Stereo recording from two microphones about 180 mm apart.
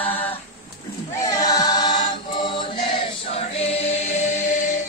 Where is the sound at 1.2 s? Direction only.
20° left (ahead or behind); by 4.8 s 45° left (ahead or behind).